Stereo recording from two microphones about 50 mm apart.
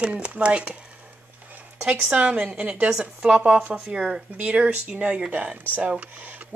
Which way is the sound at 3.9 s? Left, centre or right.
Centre.